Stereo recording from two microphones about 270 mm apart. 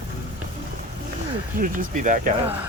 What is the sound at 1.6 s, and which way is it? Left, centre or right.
Speech, right.